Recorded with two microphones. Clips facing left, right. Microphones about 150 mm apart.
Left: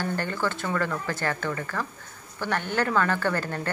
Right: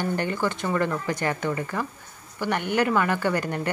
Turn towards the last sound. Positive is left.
turn(degrees=-15)  # may be behind; listen again after turning